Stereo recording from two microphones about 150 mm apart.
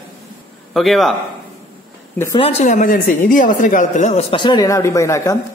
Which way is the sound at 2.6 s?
55° left (ahead or behind).